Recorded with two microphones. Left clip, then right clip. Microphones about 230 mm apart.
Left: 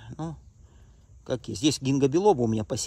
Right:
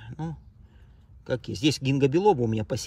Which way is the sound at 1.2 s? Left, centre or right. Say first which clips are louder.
Even; centre.